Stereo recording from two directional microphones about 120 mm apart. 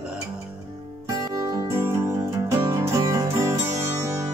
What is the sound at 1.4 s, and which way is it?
Music, 25° right (ahead or behind).